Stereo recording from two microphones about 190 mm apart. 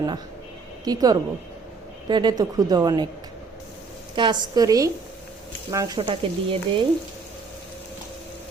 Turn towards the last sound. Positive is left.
turn(degrees=-30)  # may be behind; listen again after turning